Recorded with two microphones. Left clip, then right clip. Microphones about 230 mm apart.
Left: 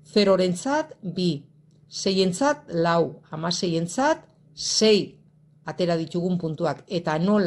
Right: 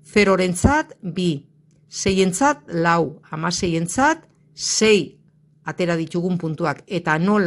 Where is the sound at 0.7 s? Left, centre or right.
Right.